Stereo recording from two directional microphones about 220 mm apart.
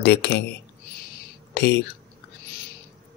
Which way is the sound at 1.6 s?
50° left (ahead or behind).